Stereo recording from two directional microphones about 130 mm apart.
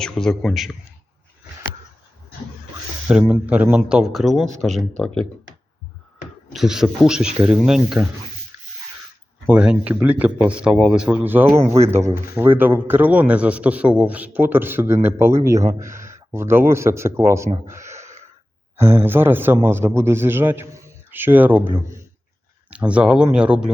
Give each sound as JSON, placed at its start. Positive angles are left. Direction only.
{"t": 0.0, "sound": "speech", "side_deg": 5}
{"t": 3.1, "sound": "speech", "side_deg": -10}
{"t": 6.5, "sound": "speech", "side_deg": -5}
{"t": 9.5, "sound": "a man's voice", "side_deg": -10}
{"t": 17.7, "sound": "gasp", "side_deg": -20}
{"t": 18.8, "sound": "a man's voice", "side_deg": -15}
{"t": 22.7, "sound": "a man's voice", "side_deg": -10}